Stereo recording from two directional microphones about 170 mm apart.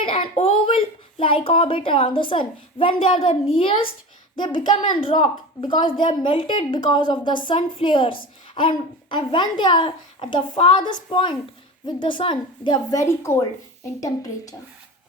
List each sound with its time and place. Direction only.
0.0 s a woman's voice: 30° left (ahead or behind)